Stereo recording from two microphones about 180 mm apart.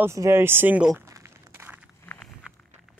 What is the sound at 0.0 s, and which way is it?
Speech, 15° right (ahead or behind).